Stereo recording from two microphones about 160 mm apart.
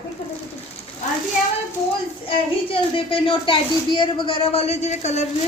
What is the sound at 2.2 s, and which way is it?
A child's voice, 35° left (ahead or behind).